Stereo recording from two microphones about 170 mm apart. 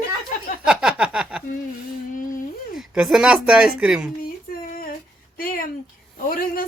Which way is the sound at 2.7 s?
5° right (ahead or behind).